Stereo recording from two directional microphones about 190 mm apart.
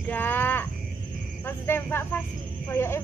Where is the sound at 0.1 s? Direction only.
10° left (ahead or behind).